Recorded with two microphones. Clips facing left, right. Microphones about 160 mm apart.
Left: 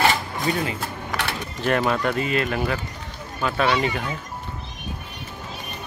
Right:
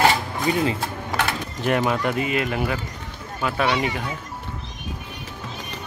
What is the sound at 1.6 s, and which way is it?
Speech, 15° right (ahead or behind).